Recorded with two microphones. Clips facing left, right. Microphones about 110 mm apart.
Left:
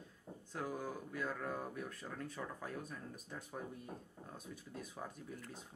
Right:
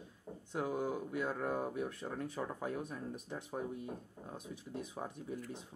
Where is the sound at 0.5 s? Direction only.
20° right (ahead or behind).